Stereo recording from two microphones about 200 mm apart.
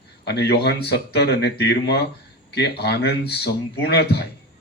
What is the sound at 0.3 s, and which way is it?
A man's voice, 55° left (ahead or behind).